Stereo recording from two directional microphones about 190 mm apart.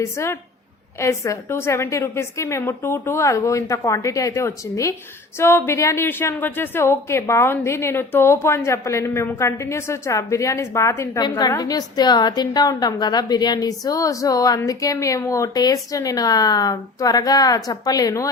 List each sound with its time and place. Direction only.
0.0 s a woman's voice: 15° left (ahead or behind)